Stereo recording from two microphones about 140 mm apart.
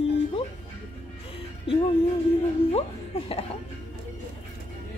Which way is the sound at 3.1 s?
45° left (ahead or behind).